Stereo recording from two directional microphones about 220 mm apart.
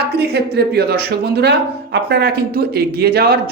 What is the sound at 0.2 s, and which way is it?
Speech, 45° right (ahead or behind).